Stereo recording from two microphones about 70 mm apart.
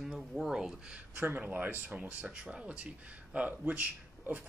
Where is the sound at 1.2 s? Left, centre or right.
Right.